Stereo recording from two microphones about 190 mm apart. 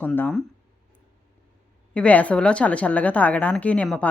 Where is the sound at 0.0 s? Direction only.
5° left (ahead or behind).